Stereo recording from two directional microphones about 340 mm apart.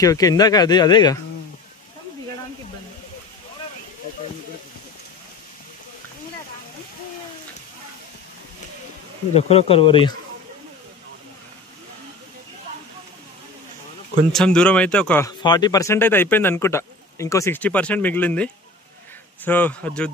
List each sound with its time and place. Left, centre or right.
0.0 s speech: centre
9.3 s speech: centre
14.3 s speech: centre